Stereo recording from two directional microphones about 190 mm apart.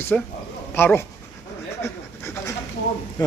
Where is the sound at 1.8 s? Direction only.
15° left (ahead or behind).